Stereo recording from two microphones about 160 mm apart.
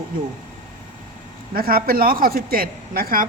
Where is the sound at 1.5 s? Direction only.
70° right (ahead or behind).